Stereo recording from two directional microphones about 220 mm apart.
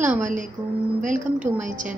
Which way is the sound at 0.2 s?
35° right (ahead or behind).